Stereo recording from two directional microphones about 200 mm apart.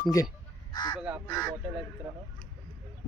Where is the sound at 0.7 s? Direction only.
20° left (ahead or behind).